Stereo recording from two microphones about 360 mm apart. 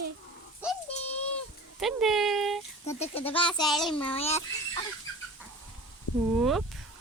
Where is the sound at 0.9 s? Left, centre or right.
Centre.